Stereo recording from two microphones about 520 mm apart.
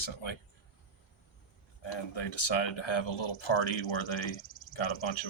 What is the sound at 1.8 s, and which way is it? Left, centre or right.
Speech, left.